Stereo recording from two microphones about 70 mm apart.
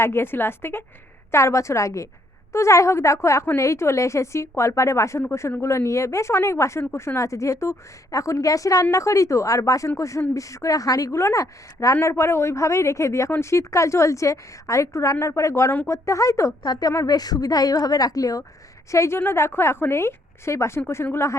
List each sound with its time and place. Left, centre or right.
0.0 s a woman's voice: left
1.3 s a woman's voice: left
12.0 s speech: left
17.1 s a woman's voice: left
18.9 s a woman's voice: left